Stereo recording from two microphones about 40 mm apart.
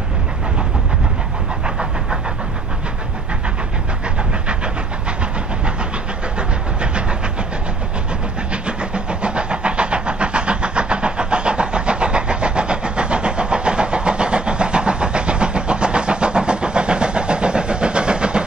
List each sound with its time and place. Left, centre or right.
6.3 s vehicle: right
8.6 s vehicle: right